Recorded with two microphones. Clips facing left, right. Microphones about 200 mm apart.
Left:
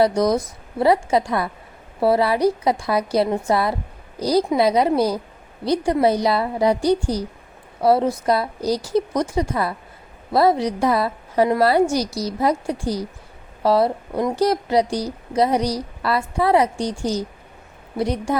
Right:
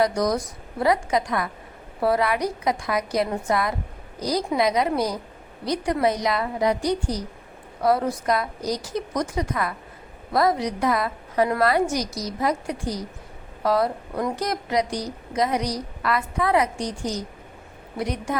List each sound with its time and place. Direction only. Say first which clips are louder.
0.0 s a woman's voice: left 4 dB; 25° left (ahead or behind)